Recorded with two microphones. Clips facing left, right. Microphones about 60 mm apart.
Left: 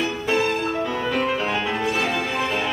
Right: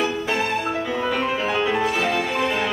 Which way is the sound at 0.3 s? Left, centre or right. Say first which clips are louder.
Left 1 dB; centre.